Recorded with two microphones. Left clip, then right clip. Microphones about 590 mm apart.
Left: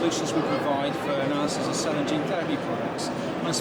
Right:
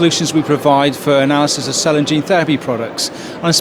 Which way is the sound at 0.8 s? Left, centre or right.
Right.